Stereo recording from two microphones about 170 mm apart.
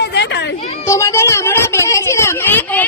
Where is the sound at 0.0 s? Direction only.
80° left.